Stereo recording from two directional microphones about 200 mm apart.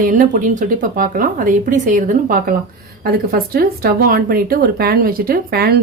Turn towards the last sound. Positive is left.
turn(degrees=-50)  # may be behind; listen again after turning